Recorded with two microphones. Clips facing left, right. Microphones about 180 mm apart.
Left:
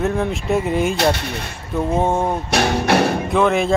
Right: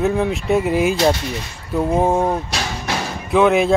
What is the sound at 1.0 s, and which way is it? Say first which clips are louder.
Speech: right 1 dB; 60° left (ahead or behind).